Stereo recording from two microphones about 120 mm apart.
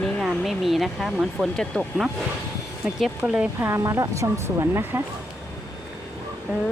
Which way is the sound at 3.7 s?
25° right (ahead or behind).